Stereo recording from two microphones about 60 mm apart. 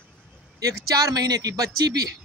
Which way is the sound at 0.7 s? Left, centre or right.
Right.